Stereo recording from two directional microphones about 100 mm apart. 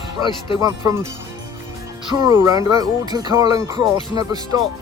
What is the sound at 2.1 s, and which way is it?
Speech, 45° right (ahead or behind).